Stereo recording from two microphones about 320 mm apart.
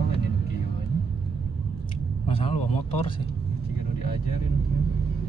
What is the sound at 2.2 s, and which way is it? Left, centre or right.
Speech, centre.